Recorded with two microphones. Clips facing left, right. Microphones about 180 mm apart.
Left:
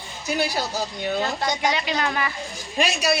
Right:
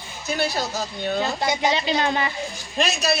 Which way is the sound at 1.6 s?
25° right (ahead or behind).